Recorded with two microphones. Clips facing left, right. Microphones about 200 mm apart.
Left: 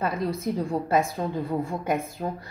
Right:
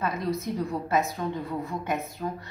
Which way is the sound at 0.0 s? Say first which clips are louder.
Left 2 dB; 30° left (ahead or behind).